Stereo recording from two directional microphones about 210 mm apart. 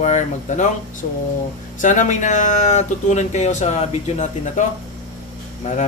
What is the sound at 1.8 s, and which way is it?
Speech, 35° left (ahead or behind).